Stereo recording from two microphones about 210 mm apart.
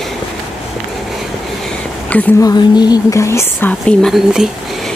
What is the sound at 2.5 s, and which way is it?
A woman's voice, 20° left (ahead or behind).